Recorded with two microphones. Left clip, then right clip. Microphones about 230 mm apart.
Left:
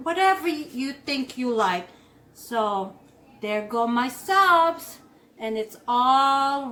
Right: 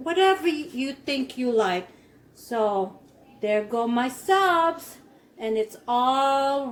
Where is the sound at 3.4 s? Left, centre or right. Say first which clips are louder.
Right 1 dB; centre.